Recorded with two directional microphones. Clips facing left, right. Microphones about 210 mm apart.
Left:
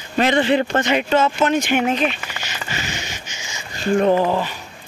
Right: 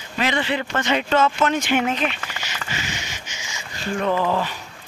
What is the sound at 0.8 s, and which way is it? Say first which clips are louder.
Speech: left 2 dB; 10° left (ahead or behind).